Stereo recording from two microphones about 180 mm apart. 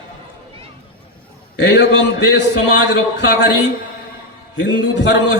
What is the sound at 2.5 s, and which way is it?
A man's voice, 85° left.